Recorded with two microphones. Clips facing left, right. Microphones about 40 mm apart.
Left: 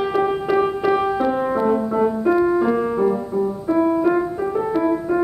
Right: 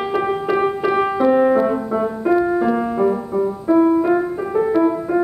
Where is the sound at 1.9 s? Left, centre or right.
Centre.